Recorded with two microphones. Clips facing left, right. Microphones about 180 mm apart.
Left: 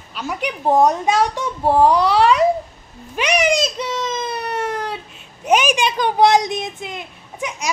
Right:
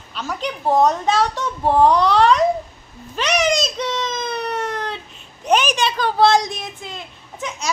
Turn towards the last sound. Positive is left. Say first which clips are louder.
# left 2 dB
turn(degrees=15)  # may be behind; listen again after turning